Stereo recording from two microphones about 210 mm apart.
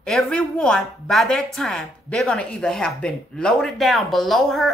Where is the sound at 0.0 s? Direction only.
5° left (ahead or behind).